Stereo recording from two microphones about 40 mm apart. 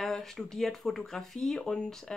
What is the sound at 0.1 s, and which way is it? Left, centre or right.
A woman's voice, centre.